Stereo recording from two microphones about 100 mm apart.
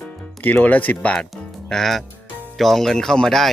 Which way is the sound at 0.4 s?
15° left (ahead or behind).